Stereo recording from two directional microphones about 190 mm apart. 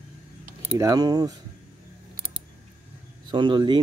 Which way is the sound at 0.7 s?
20° right (ahead or behind).